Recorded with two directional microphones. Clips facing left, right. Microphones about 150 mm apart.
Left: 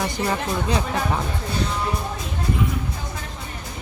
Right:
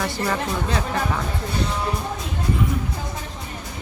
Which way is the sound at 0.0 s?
15° left (ahead or behind).